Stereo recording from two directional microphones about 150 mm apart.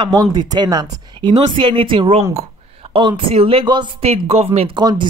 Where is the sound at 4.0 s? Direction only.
45° right (ahead or behind).